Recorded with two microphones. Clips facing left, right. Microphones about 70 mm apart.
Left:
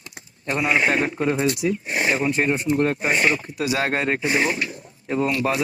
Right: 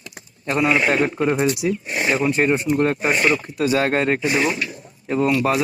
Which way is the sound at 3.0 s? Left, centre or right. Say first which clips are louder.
Right 2 dB; right.